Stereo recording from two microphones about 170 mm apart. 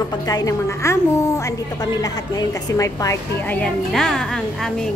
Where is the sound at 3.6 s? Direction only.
5° left (ahead or behind).